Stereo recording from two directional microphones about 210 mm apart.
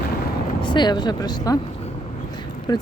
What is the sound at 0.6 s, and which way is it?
Speech, 20° left (ahead or behind).